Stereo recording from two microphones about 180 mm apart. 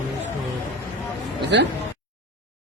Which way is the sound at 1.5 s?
75° right (ahead or behind).